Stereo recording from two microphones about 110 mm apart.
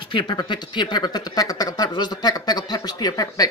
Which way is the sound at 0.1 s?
45° left (ahead or behind).